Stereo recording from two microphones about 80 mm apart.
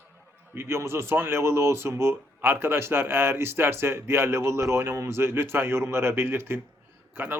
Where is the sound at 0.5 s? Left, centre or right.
Right.